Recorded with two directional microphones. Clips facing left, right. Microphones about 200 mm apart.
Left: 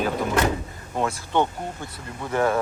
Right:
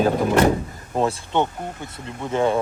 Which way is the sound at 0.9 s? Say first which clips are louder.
Right 4 dB; 30° right (ahead or behind).